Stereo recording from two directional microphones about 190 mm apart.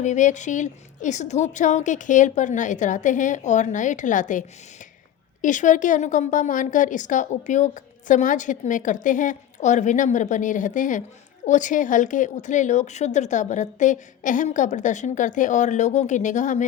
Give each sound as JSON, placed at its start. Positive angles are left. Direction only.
{"t": 0.0, "sound": "a woman's voice", "side_deg": 40}